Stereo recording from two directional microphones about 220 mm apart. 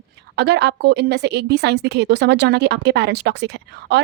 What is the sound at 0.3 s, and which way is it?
A woman's voice, 50° right (ahead or behind).